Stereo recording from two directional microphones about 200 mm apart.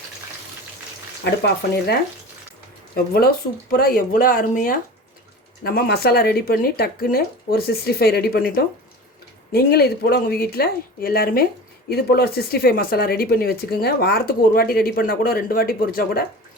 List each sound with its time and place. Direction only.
2.9 s speech: 50° left (ahead or behind)